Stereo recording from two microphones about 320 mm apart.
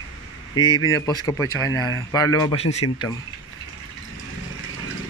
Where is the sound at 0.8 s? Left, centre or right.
Left.